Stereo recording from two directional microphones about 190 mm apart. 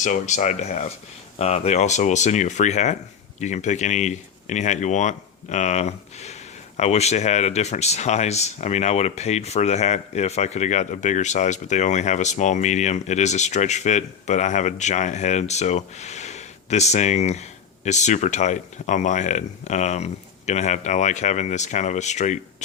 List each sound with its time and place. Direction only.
0.0 s speech: 40° left (ahead or behind)